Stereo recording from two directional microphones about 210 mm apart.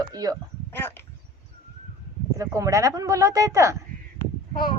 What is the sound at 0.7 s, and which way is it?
Speech, 10° left (ahead or behind).